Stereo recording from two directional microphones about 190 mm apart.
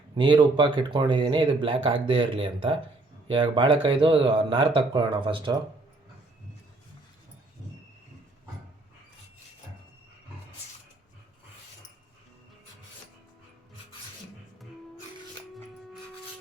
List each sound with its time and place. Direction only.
0.1 s speech: 25° right (ahead or behind)